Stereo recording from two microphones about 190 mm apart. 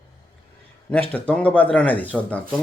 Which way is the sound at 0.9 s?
10° left (ahead or behind).